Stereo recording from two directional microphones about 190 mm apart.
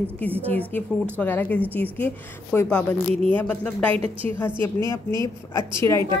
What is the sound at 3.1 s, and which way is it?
Speech, 30° right (ahead or behind).